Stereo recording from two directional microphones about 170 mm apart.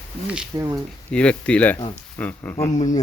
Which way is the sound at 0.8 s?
5° left (ahead or behind).